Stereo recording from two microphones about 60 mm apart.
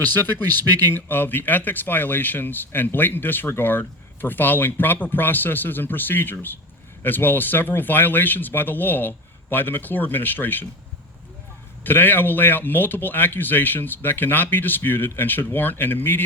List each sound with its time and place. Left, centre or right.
0.0 s speech: left
11.8 s speech: left